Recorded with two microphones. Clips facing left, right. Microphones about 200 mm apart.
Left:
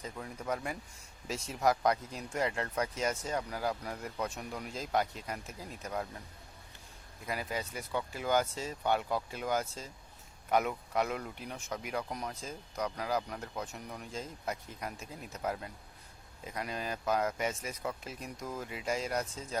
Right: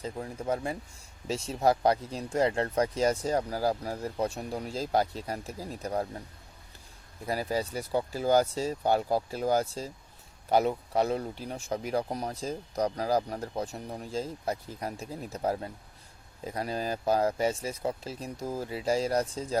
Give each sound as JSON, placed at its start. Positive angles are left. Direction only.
{"t": 0.0, "sound": "speech", "side_deg": -30}
{"t": 7.3, "sound": "speech", "side_deg": -35}